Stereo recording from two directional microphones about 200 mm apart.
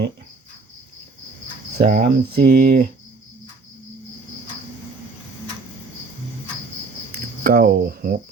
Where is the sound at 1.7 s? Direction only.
50° right (ahead or behind).